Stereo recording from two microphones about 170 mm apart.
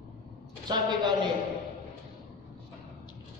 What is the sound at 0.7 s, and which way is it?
Speech, 25° right (ahead or behind).